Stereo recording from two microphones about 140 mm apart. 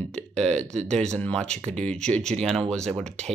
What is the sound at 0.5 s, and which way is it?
Speech, 55° right (ahead or behind).